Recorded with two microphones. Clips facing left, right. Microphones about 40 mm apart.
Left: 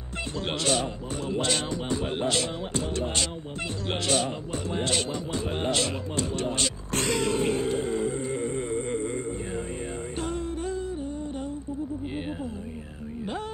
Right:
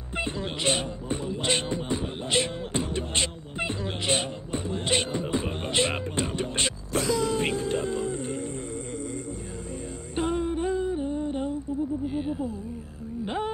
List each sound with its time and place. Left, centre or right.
0.7 s a man's voice: right
1.4 s music: right
4.1 s music: right
6.9 s a sound: left
7.8 s music: left
10.1 s music: centre